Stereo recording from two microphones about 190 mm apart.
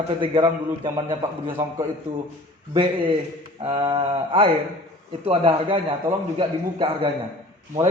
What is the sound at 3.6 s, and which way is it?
A man's voice, 25° right (ahead or behind).